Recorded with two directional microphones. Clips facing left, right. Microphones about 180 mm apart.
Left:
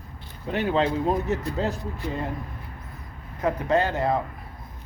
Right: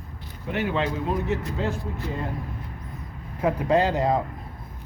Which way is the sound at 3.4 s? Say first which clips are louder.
Right 2 dB; 10° right (ahead or behind).